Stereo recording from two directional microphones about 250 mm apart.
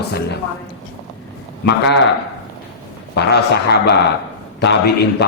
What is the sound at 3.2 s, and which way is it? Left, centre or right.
Speech, left.